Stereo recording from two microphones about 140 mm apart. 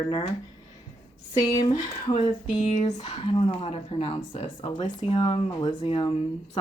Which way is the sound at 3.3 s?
40° left (ahead or behind).